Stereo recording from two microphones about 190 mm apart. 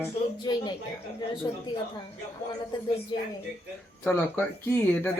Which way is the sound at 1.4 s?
20° left (ahead or behind).